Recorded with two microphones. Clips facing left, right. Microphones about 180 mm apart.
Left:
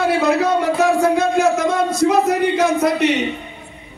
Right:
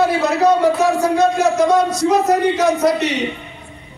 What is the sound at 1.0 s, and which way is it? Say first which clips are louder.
Speech: even; 55° left (ahead or behind).